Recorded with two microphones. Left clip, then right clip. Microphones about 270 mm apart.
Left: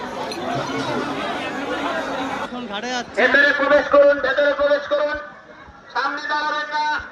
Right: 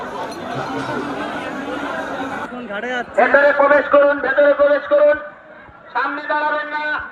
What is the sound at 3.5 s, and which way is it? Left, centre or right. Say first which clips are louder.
A man's voice: right 2 dB; centre.